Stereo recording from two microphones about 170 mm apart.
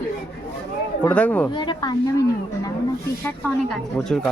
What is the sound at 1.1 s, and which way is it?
Speech, 10° left (ahead or behind).